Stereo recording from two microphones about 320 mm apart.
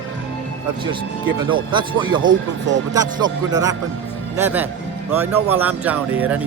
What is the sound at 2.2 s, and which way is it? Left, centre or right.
Speech, right.